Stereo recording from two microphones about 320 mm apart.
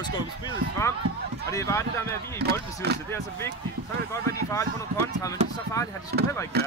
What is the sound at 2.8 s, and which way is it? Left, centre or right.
Speech, right.